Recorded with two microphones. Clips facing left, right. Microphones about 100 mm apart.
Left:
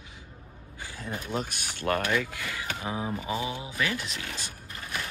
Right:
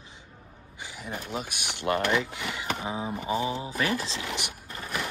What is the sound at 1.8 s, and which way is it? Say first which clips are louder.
Speech: right 1 dB; 20° right (ahead or behind).